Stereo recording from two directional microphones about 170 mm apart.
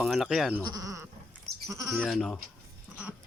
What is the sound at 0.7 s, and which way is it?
Speech, 20° right (ahead or behind).